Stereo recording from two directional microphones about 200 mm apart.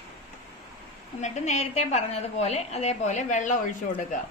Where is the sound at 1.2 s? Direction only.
35° left (ahead or behind).